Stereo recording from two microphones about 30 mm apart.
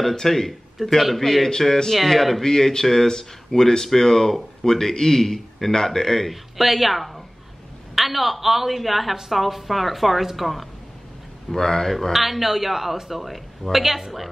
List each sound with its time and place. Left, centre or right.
0.1 s speech: centre
0.8 s a man's voice: centre
1.2 s a woman's voice: centre
2.4 s speech: centre
6.6 s a woman's voice: centre
11.5 s speech: centre
12.1 s a woman's voice: centre